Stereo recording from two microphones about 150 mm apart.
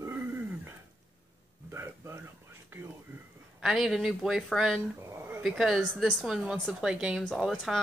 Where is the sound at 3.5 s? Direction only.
5° right (ahead or behind).